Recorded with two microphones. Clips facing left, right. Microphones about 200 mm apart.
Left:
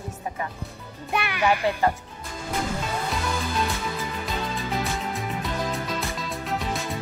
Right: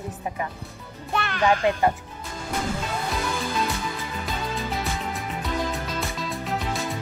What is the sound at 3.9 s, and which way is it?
Music, centre (ahead or behind).